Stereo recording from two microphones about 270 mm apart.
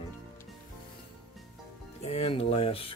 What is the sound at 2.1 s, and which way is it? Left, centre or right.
Speech, left.